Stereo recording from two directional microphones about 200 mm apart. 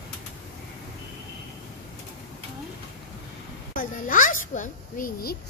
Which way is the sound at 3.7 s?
45° left (ahead or behind).